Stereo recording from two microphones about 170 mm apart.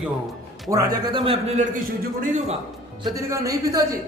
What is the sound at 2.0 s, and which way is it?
Speech, 50° right (ahead or behind).